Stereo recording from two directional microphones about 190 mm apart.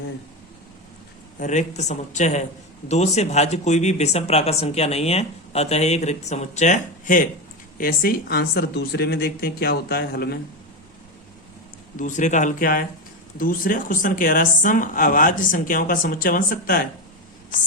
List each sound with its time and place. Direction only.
1.4 s a woman's voice: 40° left (ahead or behind); by 10.3 s 55° left (ahead or behind)
11.9 s a woman's voice: 40° left (ahead or behind)